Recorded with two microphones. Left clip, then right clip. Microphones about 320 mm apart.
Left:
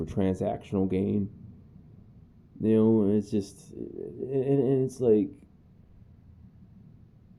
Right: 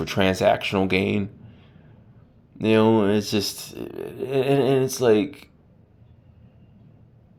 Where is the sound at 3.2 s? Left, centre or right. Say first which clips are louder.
Right 6 dB; centre.